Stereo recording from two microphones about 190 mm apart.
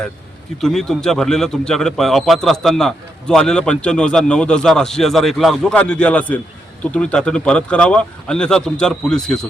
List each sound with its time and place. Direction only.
0.6 s a man's voice: centre (ahead or behind)